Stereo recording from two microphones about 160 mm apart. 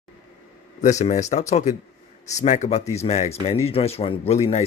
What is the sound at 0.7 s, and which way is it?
Speech, 45° left (ahead or behind).